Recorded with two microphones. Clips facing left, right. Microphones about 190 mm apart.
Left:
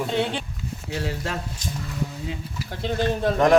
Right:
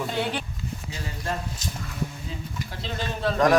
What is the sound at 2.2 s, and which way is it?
Speech, 55° left (ahead or behind).